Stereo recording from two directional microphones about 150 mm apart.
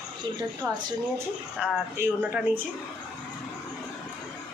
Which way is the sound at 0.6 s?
20° right (ahead or behind).